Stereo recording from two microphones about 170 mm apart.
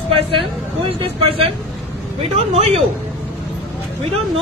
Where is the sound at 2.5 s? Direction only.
35° right (ahead or behind).